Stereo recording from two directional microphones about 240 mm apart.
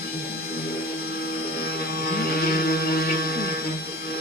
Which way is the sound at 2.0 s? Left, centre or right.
Left.